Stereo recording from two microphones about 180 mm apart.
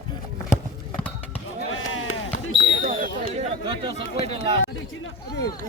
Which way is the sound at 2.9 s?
45° right (ahead or behind).